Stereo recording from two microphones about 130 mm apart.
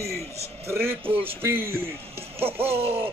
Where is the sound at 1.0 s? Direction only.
45° right (ahead or behind).